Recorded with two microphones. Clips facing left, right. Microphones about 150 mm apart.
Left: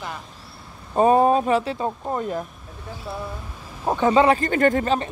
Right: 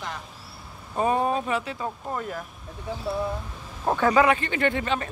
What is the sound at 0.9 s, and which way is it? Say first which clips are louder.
Speech: left 7 dB; 40° left (ahead or behind).